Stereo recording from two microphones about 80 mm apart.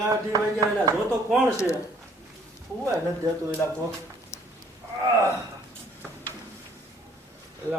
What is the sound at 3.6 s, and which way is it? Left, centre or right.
Speech, left.